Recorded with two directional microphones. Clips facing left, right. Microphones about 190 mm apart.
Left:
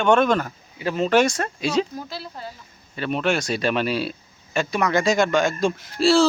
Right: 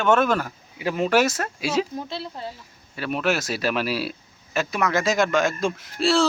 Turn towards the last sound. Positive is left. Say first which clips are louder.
# left 3 dB
turn(degrees=0)  # may be behind; listen again after turning